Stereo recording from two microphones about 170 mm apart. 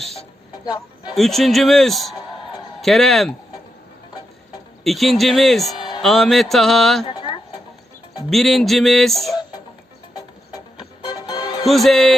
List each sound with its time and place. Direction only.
0.0 s speech: centre (ahead or behind)
1.1 s music: centre (ahead or behind)
4.8 s music: centre (ahead or behind)
7.0 s a sound: 25° left (ahead or behind)
8.3 s music: centre (ahead or behind)
11.0 s music: 25° left (ahead or behind)
11.6 s music: centre (ahead or behind)